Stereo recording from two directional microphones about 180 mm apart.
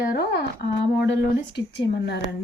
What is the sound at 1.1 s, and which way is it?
Speech, 70° left (ahead or behind).